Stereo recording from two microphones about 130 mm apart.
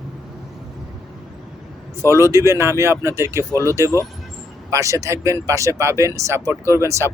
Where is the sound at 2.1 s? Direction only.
20° right (ahead or behind).